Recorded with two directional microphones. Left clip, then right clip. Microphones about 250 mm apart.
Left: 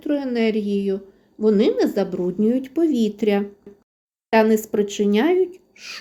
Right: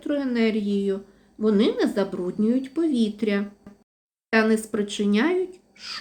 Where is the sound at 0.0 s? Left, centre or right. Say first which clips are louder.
Left 3 dB; centre.